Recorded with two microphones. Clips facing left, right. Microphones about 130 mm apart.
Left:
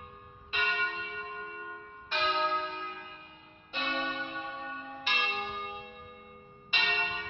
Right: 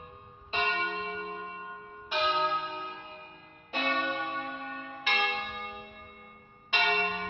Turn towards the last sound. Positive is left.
turn(degrees=-45)  # may be behind; listen again after turning